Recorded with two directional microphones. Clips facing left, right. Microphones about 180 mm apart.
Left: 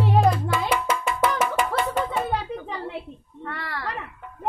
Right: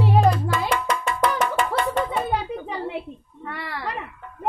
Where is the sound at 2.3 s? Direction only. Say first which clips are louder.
Right 2 dB; 15° right (ahead or behind).